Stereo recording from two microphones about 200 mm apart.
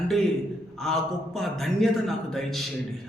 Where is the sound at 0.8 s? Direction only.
Centre (ahead or behind).